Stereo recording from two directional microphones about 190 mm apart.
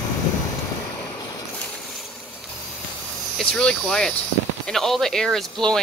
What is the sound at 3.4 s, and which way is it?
Speech, 5° left (ahead or behind).